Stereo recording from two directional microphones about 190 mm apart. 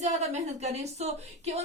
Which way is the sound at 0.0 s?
35° right (ahead or behind).